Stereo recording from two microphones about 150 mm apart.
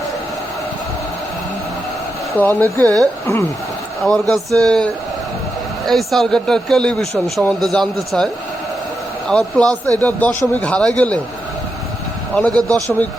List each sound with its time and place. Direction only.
2.4 s a man's voice: 10° left (ahead or behind)
4.0 s speech: 5° left (ahead or behind)
9.3 s a man's voice: 5° left (ahead or behind)
12.3 s a man's voice: 5° left (ahead or behind)